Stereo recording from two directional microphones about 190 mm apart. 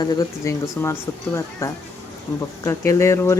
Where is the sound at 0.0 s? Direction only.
20° left (ahead or behind).